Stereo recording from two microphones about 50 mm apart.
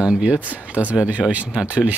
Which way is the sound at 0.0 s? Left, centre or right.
Right.